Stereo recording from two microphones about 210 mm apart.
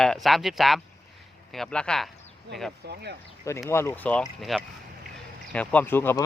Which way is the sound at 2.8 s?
50° right (ahead or behind).